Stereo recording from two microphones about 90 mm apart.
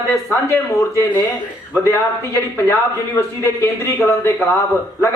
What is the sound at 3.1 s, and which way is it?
Speech, 30° left (ahead or behind).